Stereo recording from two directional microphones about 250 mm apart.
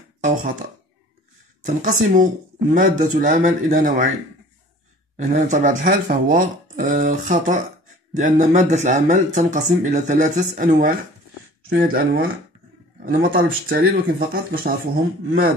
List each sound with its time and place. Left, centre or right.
0.2 s speech: right
1.7 s speech: right
5.1 s speech: right